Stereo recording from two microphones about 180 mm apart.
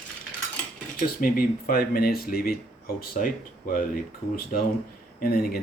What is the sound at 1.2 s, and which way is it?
Speech, 55° left (ahead or behind).